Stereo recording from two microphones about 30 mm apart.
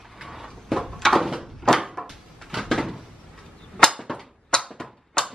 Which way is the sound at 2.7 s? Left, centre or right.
Centre.